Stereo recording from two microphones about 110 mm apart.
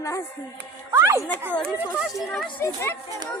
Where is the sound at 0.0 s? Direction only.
30° left (ahead or behind).